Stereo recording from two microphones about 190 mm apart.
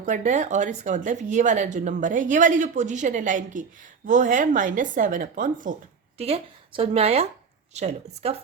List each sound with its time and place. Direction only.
0.0 s speech: 40° right (ahead or behind)
6.1 s speech: 30° right (ahead or behind)